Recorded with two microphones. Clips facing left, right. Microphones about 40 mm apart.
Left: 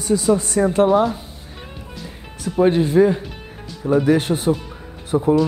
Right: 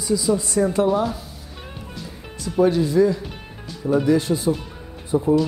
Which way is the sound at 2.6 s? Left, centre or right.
Left.